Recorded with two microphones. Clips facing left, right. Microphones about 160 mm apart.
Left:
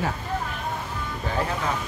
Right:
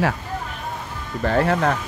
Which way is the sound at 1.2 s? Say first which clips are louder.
Right 9 dB; 70° right (ahead or behind).